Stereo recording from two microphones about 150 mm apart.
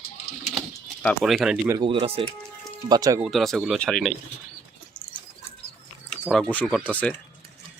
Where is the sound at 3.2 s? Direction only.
Centre (ahead or behind).